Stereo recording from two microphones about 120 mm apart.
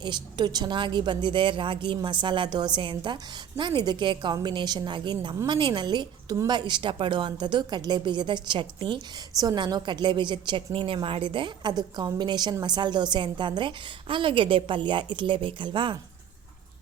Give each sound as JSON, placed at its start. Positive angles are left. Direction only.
{"t": 0.0, "sound": "a woman's voice", "side_deg": -40}
{"t": 9.4, "sound": "a woman's voice", "side_deg": -30}